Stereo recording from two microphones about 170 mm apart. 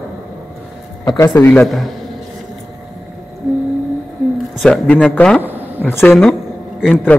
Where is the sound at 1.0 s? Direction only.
25° left (ahead or behind).